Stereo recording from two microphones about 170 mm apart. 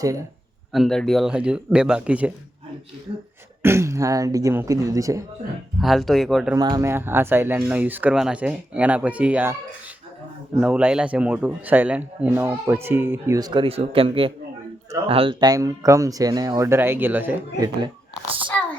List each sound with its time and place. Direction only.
0.0 s speech: 20° right (ahead or behind)
0.7 s speech: centre (ahead or behind)
3.6 s speech: 15° right (ahead or behind)
5.8 s speech: centre (ahead or behind)
6.6 s a man's voice: 25° right (ahead or behind)
10.6 s a man's voice: 5° right (ahead or behind)
17.6 s speech: 25° right (ahead or behind)